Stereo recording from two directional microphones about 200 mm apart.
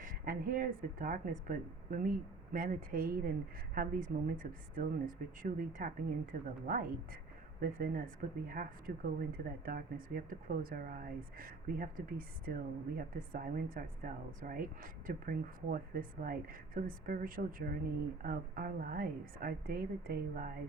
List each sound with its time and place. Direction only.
0.0 s speech: 45° right (ahead or behind)